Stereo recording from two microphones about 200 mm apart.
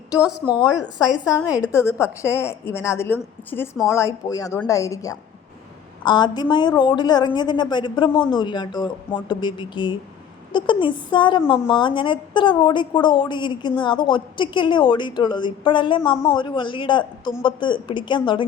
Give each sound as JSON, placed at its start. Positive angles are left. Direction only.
{"t": 0.2, "sound": "speech", "side_deg": -5}
{"t": 0.8, "sound": "a woman's voice", "side_deg": 20}